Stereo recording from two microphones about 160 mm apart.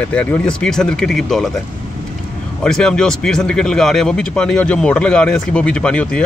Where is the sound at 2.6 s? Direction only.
5° left (ahead or behind).